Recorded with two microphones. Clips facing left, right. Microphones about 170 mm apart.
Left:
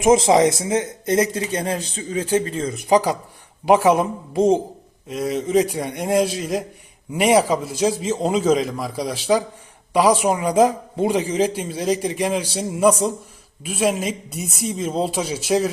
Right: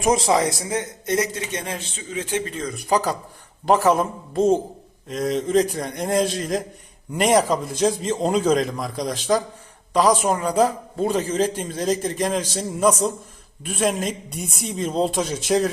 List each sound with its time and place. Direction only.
0.0 s a man's voice: 25° left (ahead or behind); by 15.7 s 5° left (ahead or behind)